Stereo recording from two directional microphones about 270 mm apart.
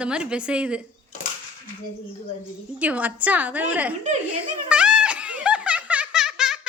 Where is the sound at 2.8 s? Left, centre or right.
Centre.